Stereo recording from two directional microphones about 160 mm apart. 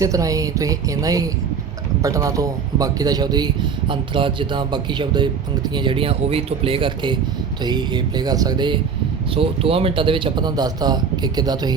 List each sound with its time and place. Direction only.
0.0 s speech: 20° right (ahead or behind)